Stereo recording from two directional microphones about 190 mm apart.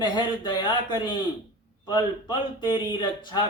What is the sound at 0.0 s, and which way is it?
A man's voice, 25° left (ahead or behind).